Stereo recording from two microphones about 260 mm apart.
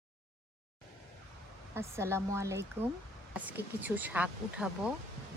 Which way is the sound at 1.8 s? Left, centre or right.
Centre.